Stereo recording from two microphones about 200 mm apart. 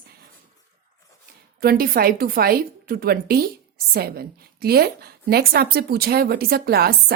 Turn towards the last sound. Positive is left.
turn(degrees=-50)  # may be behind; listen again after turning